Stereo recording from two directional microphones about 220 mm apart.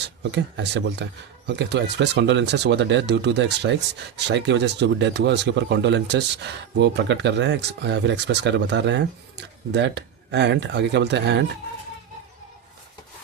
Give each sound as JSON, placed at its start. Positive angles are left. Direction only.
{"t": 0.2, "sound": "speech", "side_deg": -50}